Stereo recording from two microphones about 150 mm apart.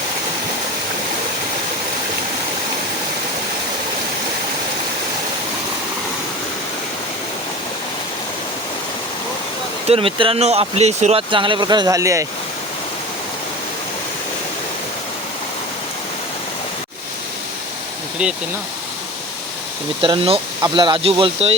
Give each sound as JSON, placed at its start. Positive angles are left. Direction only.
{"t": 9.8, "sound": "speech", "side_deg": -40}
{"t": 20.0, "sound": "speech", "side_deg": -35}